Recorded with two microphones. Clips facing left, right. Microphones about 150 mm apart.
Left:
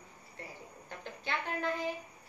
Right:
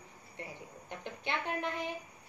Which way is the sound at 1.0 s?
20° right (ahead or behind).